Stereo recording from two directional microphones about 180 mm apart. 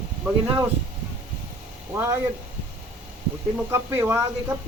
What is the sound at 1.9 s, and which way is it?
Speech, 15° right (ahead or behind).